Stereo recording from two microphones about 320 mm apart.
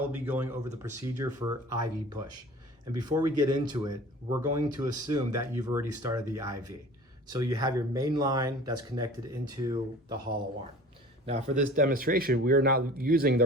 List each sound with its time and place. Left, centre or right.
0.1 s speech: centre
11.3 s a man's voice: right